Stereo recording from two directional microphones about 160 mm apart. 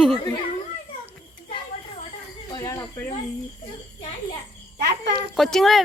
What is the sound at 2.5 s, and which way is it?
Snake, 20° left (ahead or behind).